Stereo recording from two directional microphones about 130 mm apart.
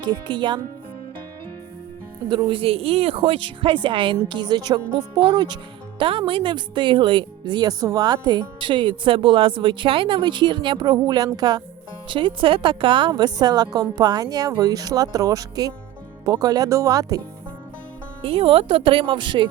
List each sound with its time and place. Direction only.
0.0 s speech: 40° right (ahead or behind)
2.3 s a woman's voice: 35° right (ahead or behind)
18.2 s speech: 45° right (ahead or behind)